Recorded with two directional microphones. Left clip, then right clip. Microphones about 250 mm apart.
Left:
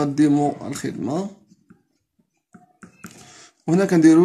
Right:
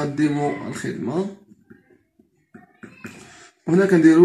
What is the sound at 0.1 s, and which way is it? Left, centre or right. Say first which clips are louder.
Speech: left 4 dB; left.